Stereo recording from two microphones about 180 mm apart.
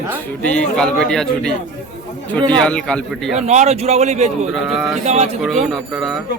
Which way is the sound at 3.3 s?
40° right (ahead or behind).